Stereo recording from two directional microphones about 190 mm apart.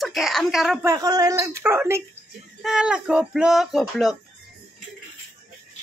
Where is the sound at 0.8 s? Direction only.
20° right (ahead or behind); by 4.1 s centre (ahead or behind).